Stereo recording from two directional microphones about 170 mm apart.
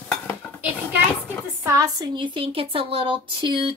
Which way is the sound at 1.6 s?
20° right (ahead or behind).